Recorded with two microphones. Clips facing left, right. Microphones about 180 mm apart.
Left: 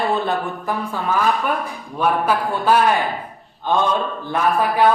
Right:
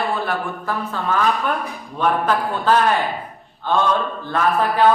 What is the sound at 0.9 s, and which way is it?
A woman's voice, 10° left (ahead or behind).